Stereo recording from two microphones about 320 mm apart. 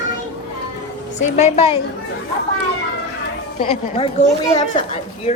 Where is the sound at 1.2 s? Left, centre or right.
Left.